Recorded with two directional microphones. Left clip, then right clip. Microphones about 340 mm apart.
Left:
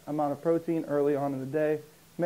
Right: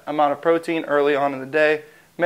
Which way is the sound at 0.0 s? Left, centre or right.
Centre.